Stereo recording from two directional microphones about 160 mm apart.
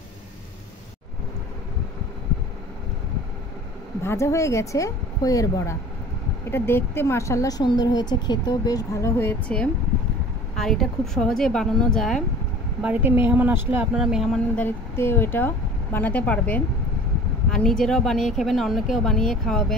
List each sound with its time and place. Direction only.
4.0 s speech: 15° left (ahead or behind)
12.8 s speech: 10° right (ahead or behind)